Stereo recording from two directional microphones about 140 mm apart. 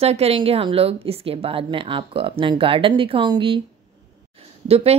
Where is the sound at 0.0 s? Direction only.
45° right (ahead or behind).